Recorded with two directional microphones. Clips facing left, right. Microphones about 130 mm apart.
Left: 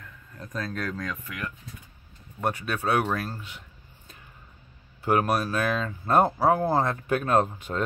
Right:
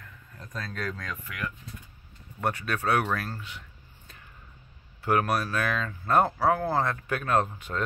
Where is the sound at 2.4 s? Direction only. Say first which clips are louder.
Left 1 dB; 15° left (ahead or behind).